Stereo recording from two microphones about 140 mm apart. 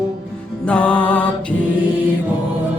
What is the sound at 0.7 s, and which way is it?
Music, 10° left (ahead or behind).